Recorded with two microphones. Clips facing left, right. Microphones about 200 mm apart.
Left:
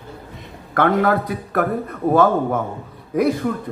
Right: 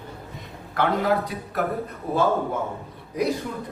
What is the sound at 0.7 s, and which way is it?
A man's voice, 60° left (ahead or behind).